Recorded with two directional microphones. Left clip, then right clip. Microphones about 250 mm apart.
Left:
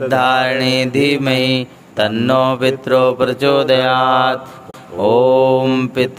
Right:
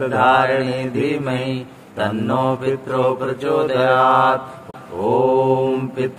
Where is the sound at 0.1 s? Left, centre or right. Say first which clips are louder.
Left 1 dB; left.